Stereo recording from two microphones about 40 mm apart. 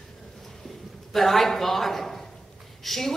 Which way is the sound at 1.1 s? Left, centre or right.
Centre.